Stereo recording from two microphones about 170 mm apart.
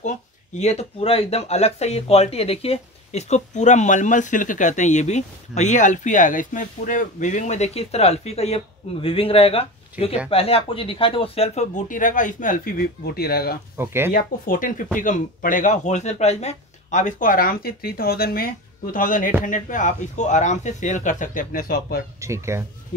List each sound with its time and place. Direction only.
0.6 s speech: 40° left (ahead or behind); by 13.6 s 65° left (ahead or behind)
13.7 s speech: 15° right (ahead or behind)
14.1 s speech: 55° left (ahead or behind)
22.2 s speech: 15° right (ahead or behind)